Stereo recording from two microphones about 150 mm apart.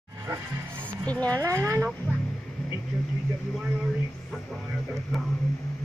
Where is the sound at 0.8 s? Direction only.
10° left (ahead or behind).